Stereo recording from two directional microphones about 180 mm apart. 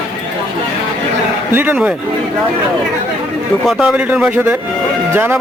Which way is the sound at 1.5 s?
10° right (ahead or behind).